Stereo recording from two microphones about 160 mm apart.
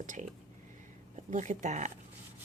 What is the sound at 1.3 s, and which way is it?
Speech, 50° right (ahead or behind).